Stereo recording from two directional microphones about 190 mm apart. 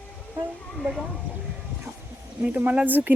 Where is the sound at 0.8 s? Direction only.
Centre (ahead or behind).